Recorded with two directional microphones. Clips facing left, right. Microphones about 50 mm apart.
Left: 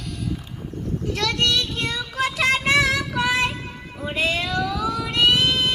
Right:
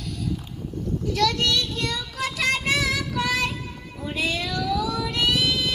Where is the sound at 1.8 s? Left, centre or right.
Left.